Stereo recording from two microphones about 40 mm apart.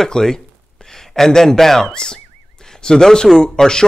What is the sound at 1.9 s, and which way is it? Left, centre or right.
Speech, centre.